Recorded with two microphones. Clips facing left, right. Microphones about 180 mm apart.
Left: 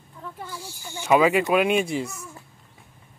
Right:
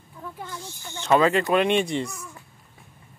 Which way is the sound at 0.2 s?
5° left (ahead or behind).